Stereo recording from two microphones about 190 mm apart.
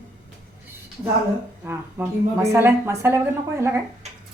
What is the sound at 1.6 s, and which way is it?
Speech, 10° right (ahead or behind).